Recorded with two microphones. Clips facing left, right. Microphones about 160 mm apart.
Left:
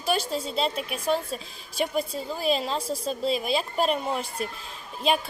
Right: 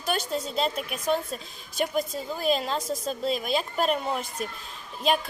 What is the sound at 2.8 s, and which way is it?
Speech, 30° left (ahead or behind).